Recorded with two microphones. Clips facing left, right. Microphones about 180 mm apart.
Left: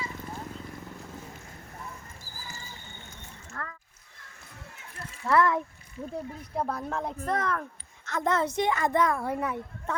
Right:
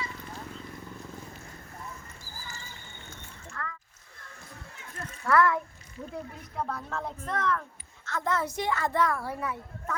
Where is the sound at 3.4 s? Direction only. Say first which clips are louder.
Right 1 dB; 40° left (ahead or behind).